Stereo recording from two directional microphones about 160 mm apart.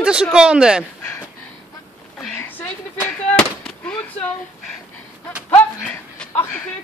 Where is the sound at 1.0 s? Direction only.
15° left (ahead or behind).